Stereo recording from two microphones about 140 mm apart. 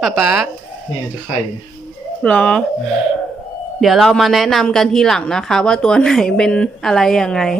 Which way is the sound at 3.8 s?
Centre (ahead or behind).